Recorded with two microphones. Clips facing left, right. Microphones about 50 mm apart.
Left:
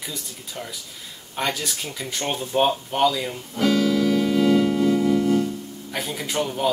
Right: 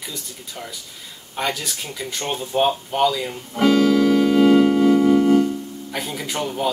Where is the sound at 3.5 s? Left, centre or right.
Right.